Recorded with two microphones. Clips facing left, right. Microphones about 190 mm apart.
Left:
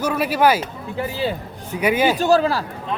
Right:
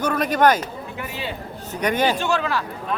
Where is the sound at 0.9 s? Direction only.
30° left (ahead or behind).